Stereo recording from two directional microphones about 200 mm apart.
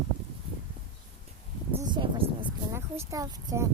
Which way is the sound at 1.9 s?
25° right (ahead or behind).